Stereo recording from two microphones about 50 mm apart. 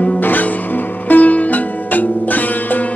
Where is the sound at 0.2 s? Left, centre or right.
Left.